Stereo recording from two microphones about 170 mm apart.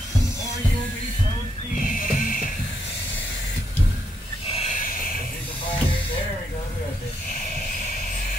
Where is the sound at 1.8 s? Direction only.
55° left (ahead or behind).